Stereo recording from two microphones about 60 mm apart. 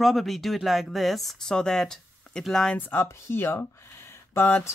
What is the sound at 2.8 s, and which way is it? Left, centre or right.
Speech, left.